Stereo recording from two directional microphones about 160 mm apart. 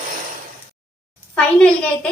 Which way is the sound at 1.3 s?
5° left (ahead or behind).